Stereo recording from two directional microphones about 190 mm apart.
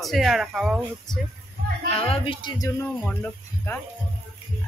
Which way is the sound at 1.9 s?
30° left (ahead or behind).